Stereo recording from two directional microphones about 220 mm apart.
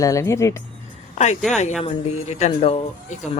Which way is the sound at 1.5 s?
30° left (ahead or behind).